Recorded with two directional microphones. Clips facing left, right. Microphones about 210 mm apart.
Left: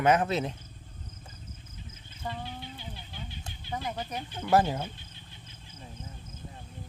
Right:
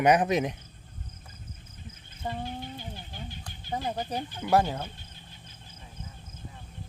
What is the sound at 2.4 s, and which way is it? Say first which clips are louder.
Vehicle: right 4 dB; 45° right (ahead or behind).